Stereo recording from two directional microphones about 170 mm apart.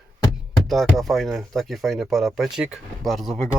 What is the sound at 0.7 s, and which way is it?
Speech, centre (ahead or behind).